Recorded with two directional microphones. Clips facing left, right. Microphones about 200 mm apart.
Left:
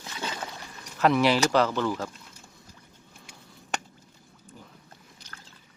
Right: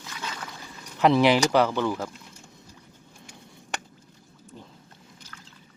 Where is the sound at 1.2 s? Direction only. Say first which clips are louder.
Right 2 dB; 15° right (ahead or behind).